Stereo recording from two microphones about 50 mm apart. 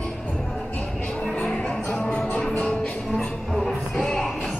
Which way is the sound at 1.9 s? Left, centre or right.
Left.